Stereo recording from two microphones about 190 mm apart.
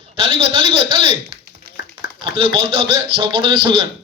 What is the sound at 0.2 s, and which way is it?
Speech, 30° right (ahead or behind).